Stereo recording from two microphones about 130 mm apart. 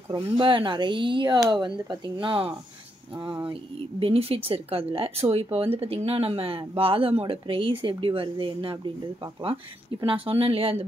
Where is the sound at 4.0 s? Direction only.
45° right (ahead or behind).